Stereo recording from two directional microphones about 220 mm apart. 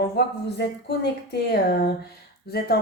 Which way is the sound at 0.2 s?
50° left (ahead or behind).